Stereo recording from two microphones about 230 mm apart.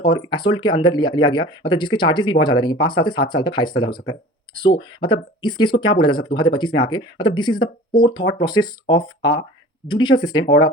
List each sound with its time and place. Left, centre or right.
0.0 s speech: centre